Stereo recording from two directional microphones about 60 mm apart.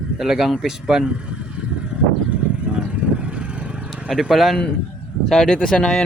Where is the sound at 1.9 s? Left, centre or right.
Centre.